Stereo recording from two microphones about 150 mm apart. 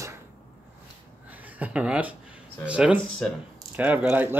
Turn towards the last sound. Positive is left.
turn(degrees=-15)  # may be behind; listen again after turning